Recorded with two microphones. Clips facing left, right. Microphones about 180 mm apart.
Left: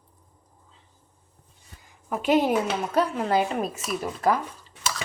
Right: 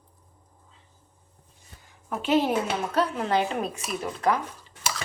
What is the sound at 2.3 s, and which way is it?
A woman's voice, 15° left (ahead or behind).